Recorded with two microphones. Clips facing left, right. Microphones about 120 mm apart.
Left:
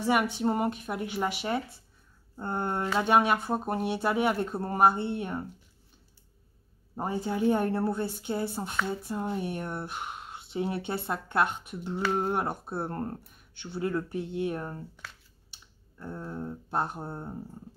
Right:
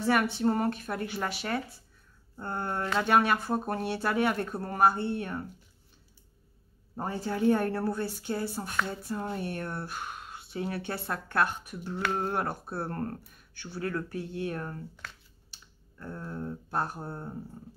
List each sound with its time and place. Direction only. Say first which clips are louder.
0.0 s speech: even; 15° left (ahead or behind)
7.0 s speech: left 1 dB; 20° left (ahead or behind)